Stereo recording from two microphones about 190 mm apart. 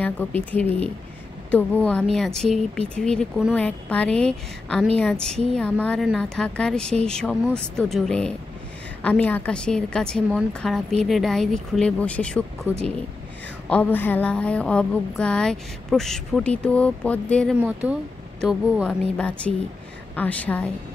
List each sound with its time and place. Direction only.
0.0 s a woman's voice: 10° left (ahead or behind)
5.3 s speech: 35° right (ahead or behind)
5.6 s a woman's voice: 5° left (ahead or behind)
12.7 s speech: 10° right (ahead or behind)
13.7 s a woman's voice: 10° left (ahead or behind)